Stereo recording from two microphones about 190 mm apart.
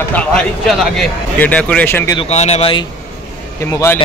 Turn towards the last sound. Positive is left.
turn(degrees=15)  # may be behind; listen again after turning